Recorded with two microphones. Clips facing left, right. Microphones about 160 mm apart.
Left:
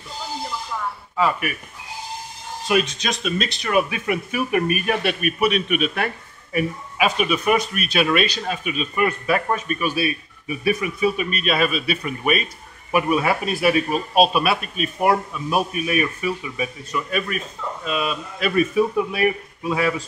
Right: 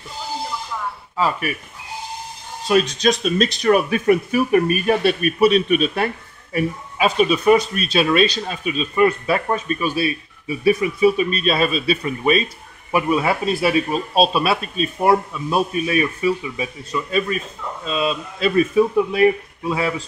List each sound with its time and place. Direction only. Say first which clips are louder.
2.7 s speech: right 5 dB; 35° right (ahead or behind)